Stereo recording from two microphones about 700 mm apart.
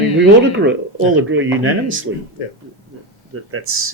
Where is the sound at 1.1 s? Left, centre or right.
Centre.